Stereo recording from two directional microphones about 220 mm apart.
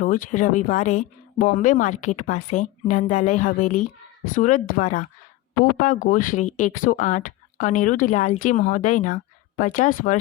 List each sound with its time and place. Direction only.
0.0 s speech: 35° left (ahead or behind)